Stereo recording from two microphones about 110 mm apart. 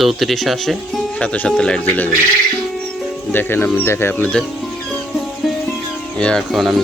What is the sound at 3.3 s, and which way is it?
Speech, 20° left (ahead or behind).